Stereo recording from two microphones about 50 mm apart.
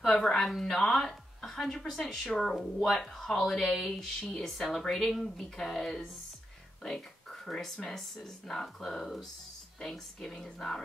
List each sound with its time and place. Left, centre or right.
0.0 s speech: centre
4.2 s speech: centre
4.5 s speech: centre